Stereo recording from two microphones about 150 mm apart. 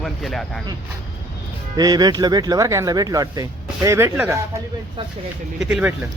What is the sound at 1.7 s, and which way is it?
Speech, 25° right (ahead or behind).